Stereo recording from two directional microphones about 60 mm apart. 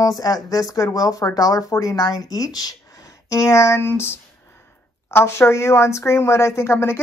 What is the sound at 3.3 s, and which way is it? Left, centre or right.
Speech, left.